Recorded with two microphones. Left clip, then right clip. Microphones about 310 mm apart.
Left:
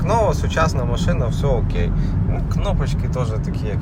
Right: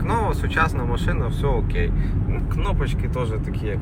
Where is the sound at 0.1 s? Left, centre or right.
Centre.